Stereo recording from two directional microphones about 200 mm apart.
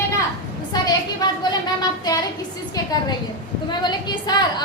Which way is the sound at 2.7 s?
20° left (ahead or behind).